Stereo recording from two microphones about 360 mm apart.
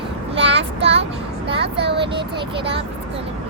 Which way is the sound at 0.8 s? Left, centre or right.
Centre.